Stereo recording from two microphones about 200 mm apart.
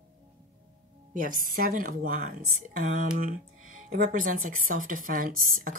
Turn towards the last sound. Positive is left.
turn(degrees=-45)  # may be behind; listen again after turning